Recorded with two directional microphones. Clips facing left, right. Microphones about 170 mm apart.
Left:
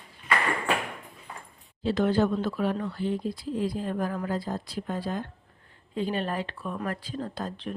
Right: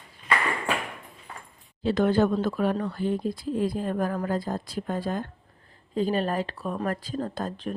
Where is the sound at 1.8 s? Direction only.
50° right (ahead or behind).